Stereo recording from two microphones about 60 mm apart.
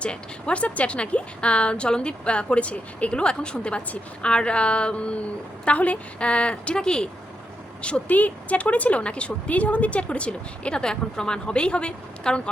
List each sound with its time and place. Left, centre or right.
0.0 s a woman's voice: centre